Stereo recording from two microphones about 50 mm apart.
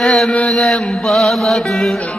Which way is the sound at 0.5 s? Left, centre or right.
Centre.